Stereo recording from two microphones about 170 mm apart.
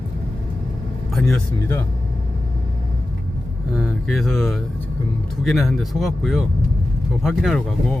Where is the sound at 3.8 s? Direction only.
5° right (ahead or behind).